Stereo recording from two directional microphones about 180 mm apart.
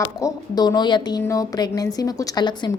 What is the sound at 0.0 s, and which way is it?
A woman's voice, 20° left (ahead or behind).